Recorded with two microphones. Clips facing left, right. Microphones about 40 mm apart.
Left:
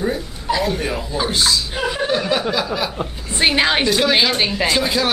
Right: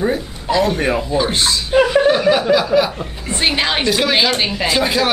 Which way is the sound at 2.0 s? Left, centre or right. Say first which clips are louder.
Right 7 dB; centre.